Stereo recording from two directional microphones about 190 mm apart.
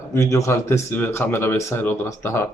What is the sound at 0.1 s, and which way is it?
Speech, 15° left (ahead or behind).